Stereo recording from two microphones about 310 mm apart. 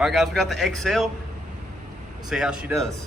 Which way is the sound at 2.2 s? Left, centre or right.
Centre.